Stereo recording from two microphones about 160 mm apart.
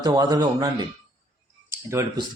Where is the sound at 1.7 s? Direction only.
15° right (ahead or behind).